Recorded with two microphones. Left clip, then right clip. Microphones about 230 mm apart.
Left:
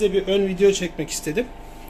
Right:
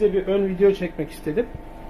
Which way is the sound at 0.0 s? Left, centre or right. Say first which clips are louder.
Even; centre.